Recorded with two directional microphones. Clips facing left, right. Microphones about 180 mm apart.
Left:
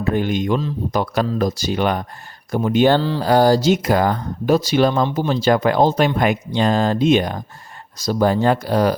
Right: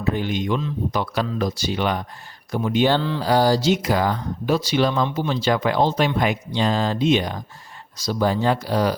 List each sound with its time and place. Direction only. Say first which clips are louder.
0.0 s speech: left 4 dB; 50° left (ahead or behind)
3.0 s a sound: left 3 dB; 35° left (ahead or behind)
3.2 s speech: left 4 dB; 50° left (ahead or behind)